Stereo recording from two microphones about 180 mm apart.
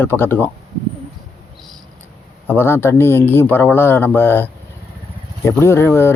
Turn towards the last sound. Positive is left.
turn(degrees=15)  # may be behind; listen again after turning